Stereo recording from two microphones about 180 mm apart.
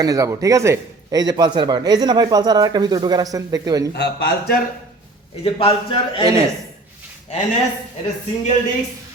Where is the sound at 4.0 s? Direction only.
60° left (ahead or behind).